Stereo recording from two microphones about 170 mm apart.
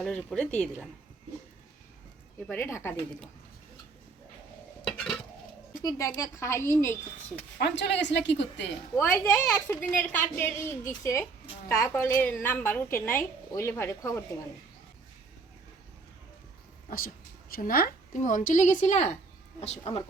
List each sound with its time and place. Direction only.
0.0 s a woman's voice: 5° left (ahead or behind)
2.5 s a woman's voice: 15° left (ahead or behind)
4.9 s a sound: 5° left (ahead or behind)
5.8 s a woman's voice: 20° left (ahead or behind)
7.6 s a woman's voice: 90° left
9.0 s a woman's voice: 10° left (ahead or behind)
17.5 s a woman's voice: 60° left (ahead or behind); by 20.0 s 40° left (ahead or behind)